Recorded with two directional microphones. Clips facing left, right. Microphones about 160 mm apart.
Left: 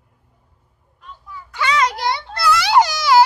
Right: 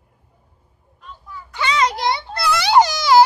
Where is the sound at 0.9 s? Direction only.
10° left (ahead or behind).